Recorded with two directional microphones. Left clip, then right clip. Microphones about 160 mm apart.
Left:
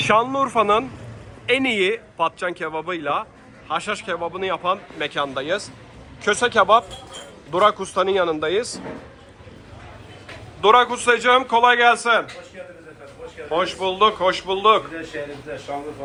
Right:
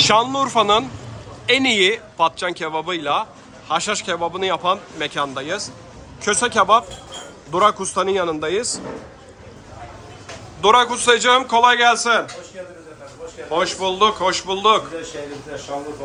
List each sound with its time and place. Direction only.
0.1 s speech: 5° right (ahead or behind)
10.6 s a man's voice: 10° right (ahead or behind)
13.5 s speech: 10° right (ahead or behind)